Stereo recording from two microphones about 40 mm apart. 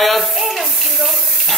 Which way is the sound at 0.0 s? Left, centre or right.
Centre.